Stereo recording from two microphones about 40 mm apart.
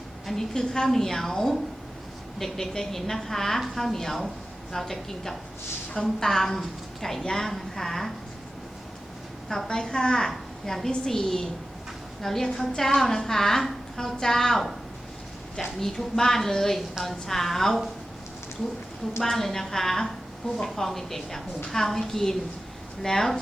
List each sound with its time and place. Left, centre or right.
0.3 s a woman's voice: centre
9.6 s a woman's voice: centre
15.8 s a woman's voice: centre
19.2 s a woman's voice: centre